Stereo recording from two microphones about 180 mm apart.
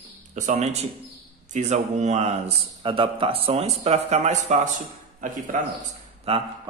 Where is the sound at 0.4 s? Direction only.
40° right (ahead or behind).